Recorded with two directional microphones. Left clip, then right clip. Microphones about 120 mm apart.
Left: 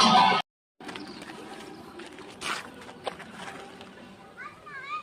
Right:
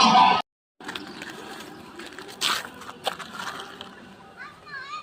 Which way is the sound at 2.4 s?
60° right (ahead or behind).